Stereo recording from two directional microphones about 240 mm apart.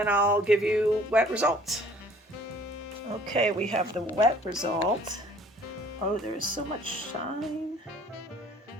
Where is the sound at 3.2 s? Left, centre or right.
Centre.